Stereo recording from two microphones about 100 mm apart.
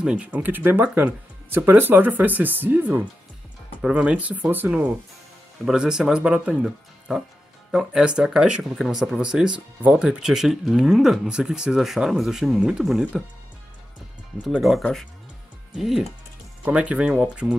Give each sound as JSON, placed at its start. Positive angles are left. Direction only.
{"t": 0.0, "sound": "speech", "side_deg": -10}
{"t": 14.4, "sound": "speech", "side_deg": -5}